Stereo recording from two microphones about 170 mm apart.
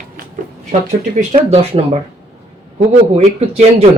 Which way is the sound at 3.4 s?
40° right (ahead or behind).